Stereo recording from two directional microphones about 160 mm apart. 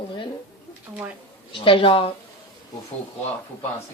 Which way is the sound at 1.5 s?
35° left (ahead or behind).